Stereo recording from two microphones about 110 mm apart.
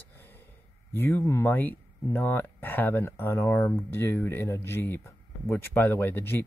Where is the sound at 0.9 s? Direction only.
20° left (ahead or behind).